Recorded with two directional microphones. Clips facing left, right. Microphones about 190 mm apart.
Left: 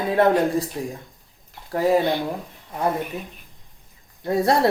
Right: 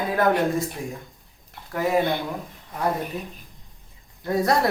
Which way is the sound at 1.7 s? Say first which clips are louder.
Left 5 dB; 35° left (ahead or behind).